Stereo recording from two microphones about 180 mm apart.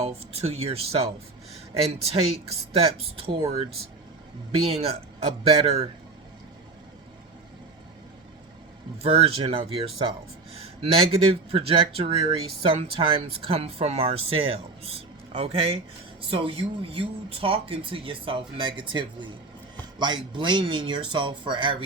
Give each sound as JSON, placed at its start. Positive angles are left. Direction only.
{"t": 0.0, "sound": "speech", "side_deg": -35}
{"t": 5.5, "sound": "speech", "side_deg": -35}
{"t": 9.0, "sound": "speech", "side_deg": -30}